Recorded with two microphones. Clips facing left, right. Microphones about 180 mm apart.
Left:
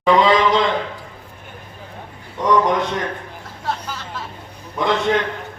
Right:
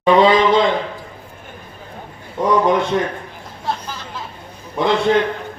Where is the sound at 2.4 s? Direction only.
30° right (ahead or behind).